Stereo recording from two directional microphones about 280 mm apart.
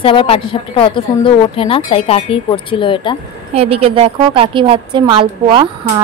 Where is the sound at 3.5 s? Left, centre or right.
Right.